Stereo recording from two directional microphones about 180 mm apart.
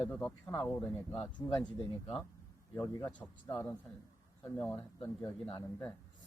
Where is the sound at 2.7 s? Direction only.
20° left (ahead or behind).